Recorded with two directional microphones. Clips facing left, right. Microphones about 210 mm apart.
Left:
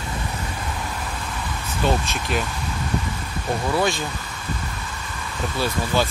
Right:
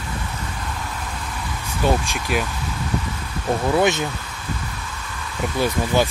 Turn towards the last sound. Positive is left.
turn(degrees=-15)  # may be behind; listen again after turning